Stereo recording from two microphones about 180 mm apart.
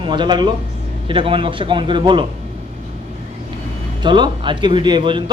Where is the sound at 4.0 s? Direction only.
25° right (ahead or behind).